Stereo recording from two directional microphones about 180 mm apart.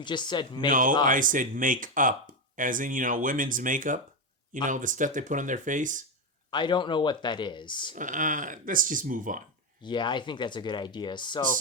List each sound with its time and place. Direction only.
0.0 s speech: 25° left (ahead or behind)
0.7 s speech: 50° right (ahead or behind)
6.5 s speech: 25° left (ahead or behind)
7.9 s speech: 45° right (ahead or behind)
9.8 s speech: 25° left (ahead or behind)